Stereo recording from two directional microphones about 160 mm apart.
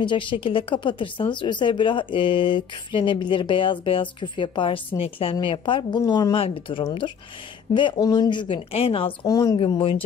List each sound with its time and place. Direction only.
0.0 s speech: 30° left (ahead or behind)
9.3 s speech: 20° left (ahead or behind)
9.6 s speech: 35° left (ahead or behind)